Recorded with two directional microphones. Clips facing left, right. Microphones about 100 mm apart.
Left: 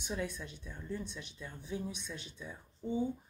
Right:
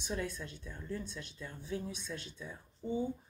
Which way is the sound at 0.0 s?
10° left (ahead or behind).